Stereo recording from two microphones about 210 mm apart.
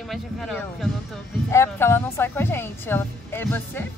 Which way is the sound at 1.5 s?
10° left (ahead or behind).